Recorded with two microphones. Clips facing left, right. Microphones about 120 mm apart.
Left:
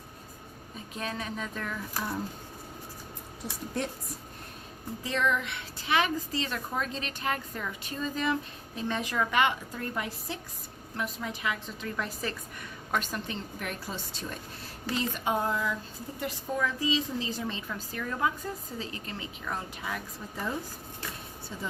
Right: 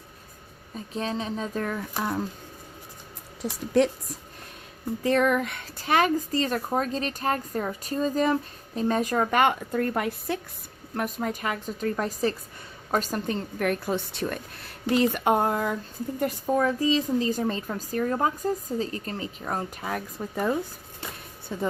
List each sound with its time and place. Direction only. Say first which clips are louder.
0.9 s speech: right 6 dB; 30° right (ahead or behind)
3.7 s a woman's voice: right 12 dB; 90° right
5.0 s a woman's voice: right 7 dB; 50° right (ahead or behind)
16.2 s a woman's voice: right 7 dB; 45° right (ahead or behind)